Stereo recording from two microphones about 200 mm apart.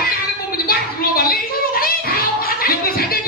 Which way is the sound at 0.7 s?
50° left (ahead or behind).